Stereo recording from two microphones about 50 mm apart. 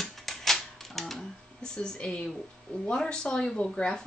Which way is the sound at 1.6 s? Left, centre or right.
Centre.